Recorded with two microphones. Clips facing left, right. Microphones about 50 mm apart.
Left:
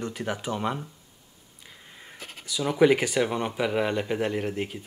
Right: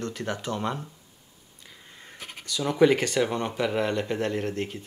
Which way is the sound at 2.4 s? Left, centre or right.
Centre.